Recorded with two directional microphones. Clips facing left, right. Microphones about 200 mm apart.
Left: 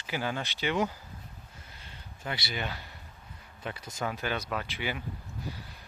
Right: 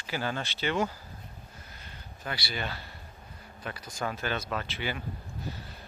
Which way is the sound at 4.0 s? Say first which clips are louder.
Even; 15° left (ahead or behind).